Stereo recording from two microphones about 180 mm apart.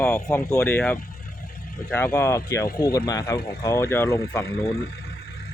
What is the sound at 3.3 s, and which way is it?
Speech, 60° left (ahead or behind).